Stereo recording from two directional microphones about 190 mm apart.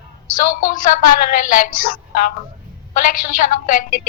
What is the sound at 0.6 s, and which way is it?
A woman's voice, 45° left (ahead or behind).